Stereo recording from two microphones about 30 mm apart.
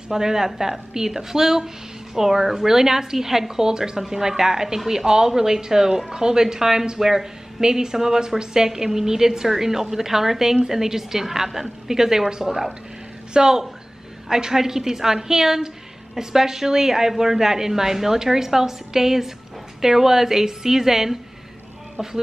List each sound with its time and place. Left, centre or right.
0.1 s a woman's voice: centre
12.4 s a woman's voice: centre
13.3 s a woman's voice: right